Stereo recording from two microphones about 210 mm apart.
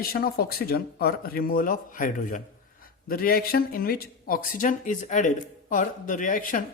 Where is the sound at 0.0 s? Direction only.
45° left (ahead or behind).